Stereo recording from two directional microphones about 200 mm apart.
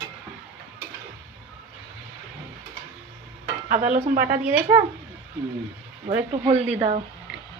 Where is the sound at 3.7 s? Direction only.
40° right (ahead or behind).